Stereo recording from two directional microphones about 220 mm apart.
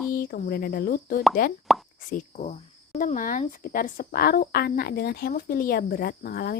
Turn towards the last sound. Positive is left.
turn(degrees=45)  # may be behind; listen again after turning